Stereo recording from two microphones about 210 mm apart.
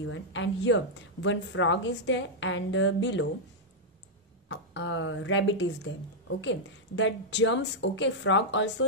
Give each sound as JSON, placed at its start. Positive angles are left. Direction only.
{"t": 0.0, "sound": "a woman's voice", "side_deg": 65}
{"t": 4.5, "sound": "a woman's voice", "side_deg": 60}